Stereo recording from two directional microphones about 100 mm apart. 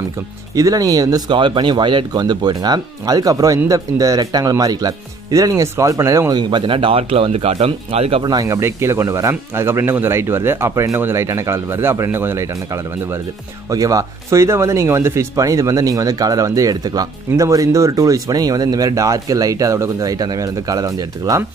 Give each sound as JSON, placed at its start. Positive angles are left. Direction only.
{"t": 0.6, "sound": "speech", "side_deg": -35}
{"t": 1.3, "sound": "speech", "side_deg": -50}
{"t": 6.3, "sound": "speech", "side_deg": -55}
{"t": 8.2, "sound": "speech", "side_deg": -40}
{"t": 8.5, "sound": "speech", "side_deg": -25}